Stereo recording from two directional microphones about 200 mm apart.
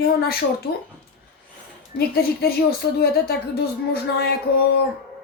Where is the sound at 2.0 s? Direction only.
50° left (ahead or behind).